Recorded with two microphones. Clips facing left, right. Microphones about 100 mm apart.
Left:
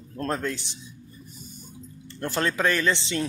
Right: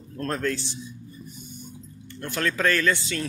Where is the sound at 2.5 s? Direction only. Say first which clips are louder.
Right 3 dB; 20° left (ahead or behind).